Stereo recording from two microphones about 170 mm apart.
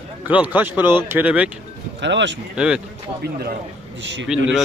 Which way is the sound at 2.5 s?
5° right (ahead or behind).